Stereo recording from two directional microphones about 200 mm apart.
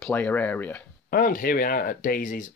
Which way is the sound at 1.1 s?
45° left (ahead or behind).